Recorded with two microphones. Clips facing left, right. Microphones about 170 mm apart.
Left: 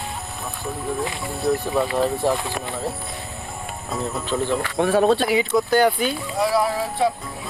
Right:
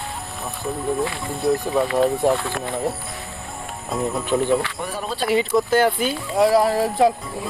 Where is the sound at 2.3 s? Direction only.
15° left (ahead or behind).